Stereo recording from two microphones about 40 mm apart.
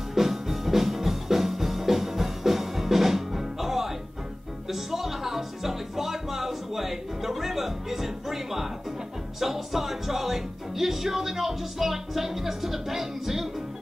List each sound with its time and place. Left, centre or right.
0.1 s music: centre